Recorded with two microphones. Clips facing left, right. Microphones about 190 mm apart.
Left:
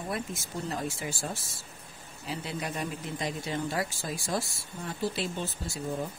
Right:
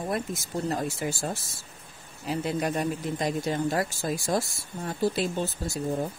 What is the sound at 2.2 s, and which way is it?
Speech, 50° right (ahead or behind).